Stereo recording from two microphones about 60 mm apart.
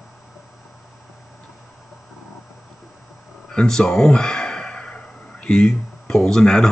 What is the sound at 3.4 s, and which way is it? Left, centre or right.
Speech, centre.